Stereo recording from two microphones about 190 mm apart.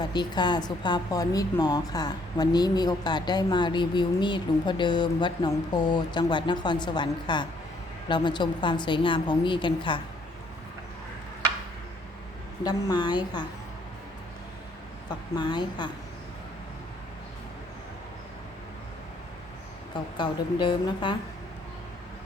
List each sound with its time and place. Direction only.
0.0 s a woman's voice: 25° left (ahead or behind)
12.6 s a woman's voice: 25° left (ahead or behind)
15.4 s a woman's voice: 25° left (ahead or behind)
20.1 s a woman's voice: 25° left (ahead or behind)